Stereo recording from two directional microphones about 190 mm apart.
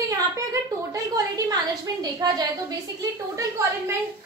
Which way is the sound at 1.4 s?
20° right (ahead or behind).